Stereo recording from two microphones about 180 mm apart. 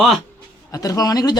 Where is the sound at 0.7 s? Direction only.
20° left (ahead or behind).